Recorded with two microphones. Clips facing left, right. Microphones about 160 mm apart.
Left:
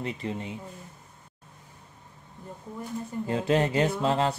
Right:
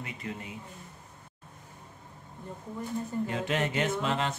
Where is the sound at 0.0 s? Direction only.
25° left (ahead or behind).